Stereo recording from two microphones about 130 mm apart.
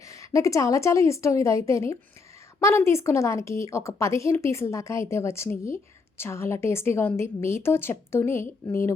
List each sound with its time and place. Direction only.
0.1 s a woman's voice: 25° left (ahead or behind)